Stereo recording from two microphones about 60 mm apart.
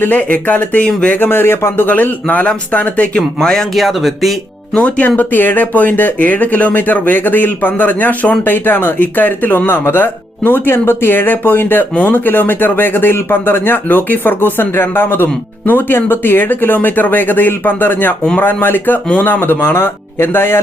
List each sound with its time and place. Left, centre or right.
0.2 s a man's voice: left
1.2 s a man's voice: left
3.2 s speech: centre
3.8 s speech: centre
4.7 s speech: left